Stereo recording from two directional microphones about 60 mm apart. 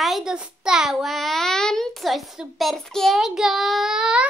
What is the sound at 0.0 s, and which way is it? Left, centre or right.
A child's voice, centre.